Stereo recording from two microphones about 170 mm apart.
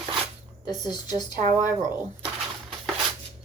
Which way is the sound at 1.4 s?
50° right (ahead or behind).